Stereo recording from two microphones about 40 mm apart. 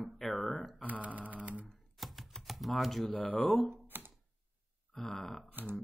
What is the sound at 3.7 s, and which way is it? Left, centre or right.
Typewriter, right.